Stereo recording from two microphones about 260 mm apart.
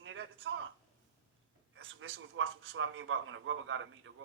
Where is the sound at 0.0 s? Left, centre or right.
Right.